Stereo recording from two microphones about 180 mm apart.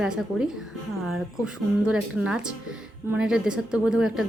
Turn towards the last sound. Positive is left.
turn(degrees=-5)  # may be behind; listen again after turning